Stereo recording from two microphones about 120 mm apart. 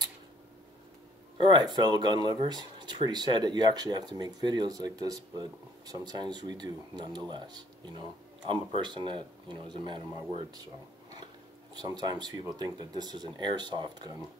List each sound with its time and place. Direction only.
1.4 s speech: 35° right (ahead or behind)
11.7 s speech: 35° right (ahead or behind)